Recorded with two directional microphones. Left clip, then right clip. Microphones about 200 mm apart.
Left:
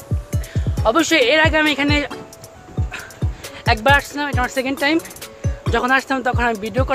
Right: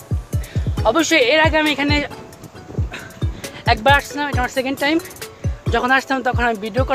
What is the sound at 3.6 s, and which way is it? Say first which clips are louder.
Speech: even; centre (ahead or behind).